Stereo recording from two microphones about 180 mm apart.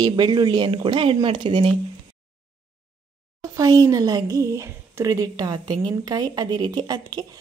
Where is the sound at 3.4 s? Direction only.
20° right (ahead or behind).